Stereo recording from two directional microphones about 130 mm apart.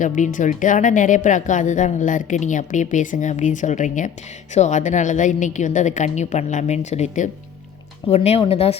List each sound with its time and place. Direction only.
0.0 s a woman's voice: 85° left; by 8.7 s 50° left (ahead or behind)